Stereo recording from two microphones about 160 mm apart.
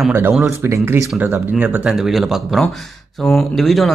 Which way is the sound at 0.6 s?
15° right (ahead or behind).